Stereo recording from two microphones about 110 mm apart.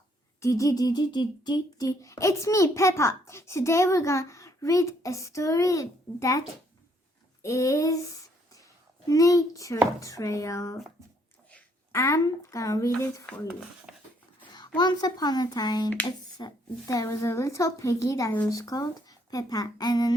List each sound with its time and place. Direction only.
0.3 s speech: 30° left (ahead or behind)
7.4 s speech: 30° left (ahead or behind)
11.9 s speech: 30° left (ahead or behind)
13.9 s wheeze: 5° right (ahead or behind)
14.8 s speech: 40° left (ahead or behind)